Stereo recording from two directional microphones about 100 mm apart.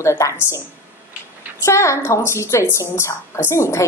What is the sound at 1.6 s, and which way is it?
A woman's voice, 30° left (ahead or behind).